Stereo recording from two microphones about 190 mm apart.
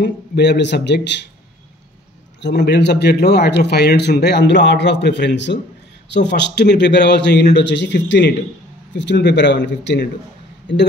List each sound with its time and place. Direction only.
0.0 s speech: 65° left (ahead or behind)
2.4 s a man's voice: 65° left (ahead or behind)